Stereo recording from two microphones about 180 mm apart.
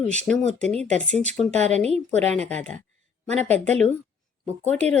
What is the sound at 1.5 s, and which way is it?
A woman's voice, 40° right (ahead or behind).